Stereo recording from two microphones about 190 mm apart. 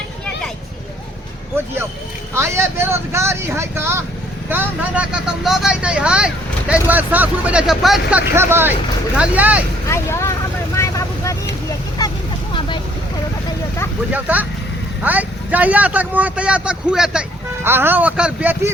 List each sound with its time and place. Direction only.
2.3 s speech: 15° right (ahead or behind)
8.4 s speech: 10° right (ahead or behind)
9.9 s speech: 15° left (ahead or behind)
10.8 s vehicle: 15° left (ahead or behind)
12.5 s vehicle: 25° left (ahead or behind)
14.1 s speech: 10° right (ahead or behind)